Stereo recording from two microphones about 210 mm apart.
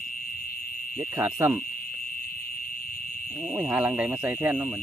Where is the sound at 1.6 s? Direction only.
45° left (ahead or behind).